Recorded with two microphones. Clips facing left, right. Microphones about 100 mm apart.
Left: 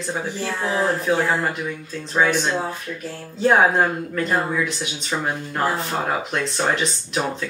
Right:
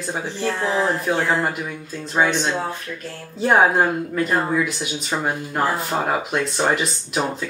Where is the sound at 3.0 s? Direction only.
5° right (ahead or behind).